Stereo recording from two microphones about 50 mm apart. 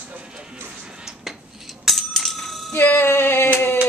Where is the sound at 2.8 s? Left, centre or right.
Left.